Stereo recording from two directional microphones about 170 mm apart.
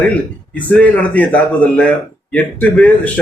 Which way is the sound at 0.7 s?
10° left (ahead or behind).